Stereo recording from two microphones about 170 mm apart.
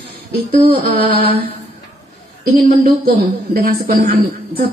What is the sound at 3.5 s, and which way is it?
Speech, 60° right (ahead or behind).